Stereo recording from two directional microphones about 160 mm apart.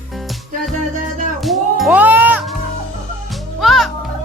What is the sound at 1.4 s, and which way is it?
Music, centre (ahead or behind).